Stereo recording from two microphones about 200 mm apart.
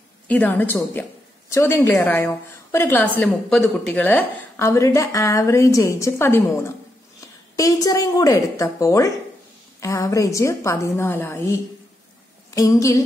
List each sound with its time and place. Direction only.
0.3 s a woman's voice: 10° left (ahead or behind)
12.5 s a woman's voice: 15° left (ahead or behind)